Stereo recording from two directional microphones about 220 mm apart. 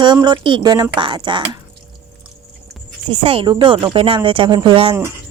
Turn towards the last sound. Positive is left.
turn(degrees=-20)  # may be behind; listen again after turning